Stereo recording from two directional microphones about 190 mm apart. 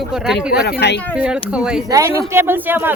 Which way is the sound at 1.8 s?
15° right (ahead or behind).